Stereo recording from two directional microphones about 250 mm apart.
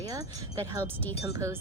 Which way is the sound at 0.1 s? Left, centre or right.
Centre.